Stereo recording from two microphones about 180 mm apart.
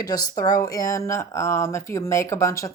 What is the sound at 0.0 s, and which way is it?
Speech, 20° left (ahead or behind).